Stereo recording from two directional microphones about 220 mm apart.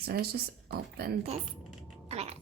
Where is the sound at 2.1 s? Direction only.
30° right (ahead or behind).